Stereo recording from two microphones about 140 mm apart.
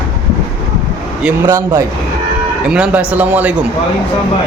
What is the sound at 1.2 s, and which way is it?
Speech, 15° right (ahead or behind).